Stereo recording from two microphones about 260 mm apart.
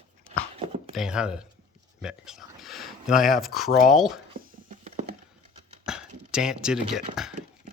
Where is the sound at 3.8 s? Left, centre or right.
Centre.